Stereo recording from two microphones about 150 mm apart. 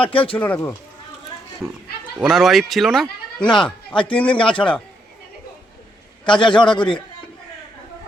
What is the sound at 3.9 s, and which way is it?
Speech, 35° left (ahead or behind).